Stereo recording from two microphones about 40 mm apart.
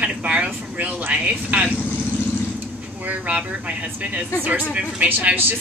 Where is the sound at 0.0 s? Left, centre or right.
Right.